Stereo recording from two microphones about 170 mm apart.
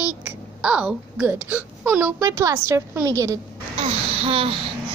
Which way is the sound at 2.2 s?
20° right (ahead or behind).